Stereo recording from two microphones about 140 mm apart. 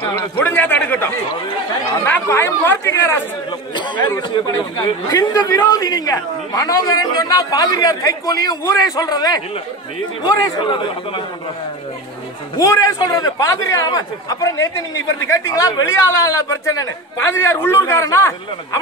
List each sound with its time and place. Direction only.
0.4 s a man's voice: 10° left (ahead or behind)
3.7 s a man's voice: 35° left (ahead or behind)
12.5 s a man's voice: 25° left (ahead or behind)